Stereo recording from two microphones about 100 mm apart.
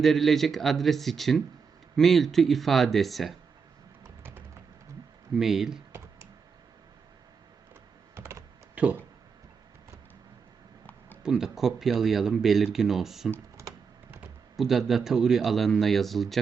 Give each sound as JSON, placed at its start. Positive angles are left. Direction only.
{"t": 0.0, "sound": "speech", "side_deg": 5}
{"t": 4.2, "sound": "a sound", "side_deg": -20}
{"t": 5.4, "sound": "speech", "side_deg": -5}
{"t": 8.1, "sound": "computer keyboard", "side_deg": -30}
{"t": 8.7, "sound": "a sound", "side_deg": -15}
{"t": 11.2, "sound": "speech", "side_deg": -5}
{"t": 14.5, "sound": "speech", "side_deg": 0}